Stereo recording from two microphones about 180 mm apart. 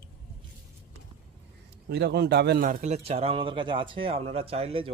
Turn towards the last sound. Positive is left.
turn(degrees=-30)  # may be behind; listen again after turning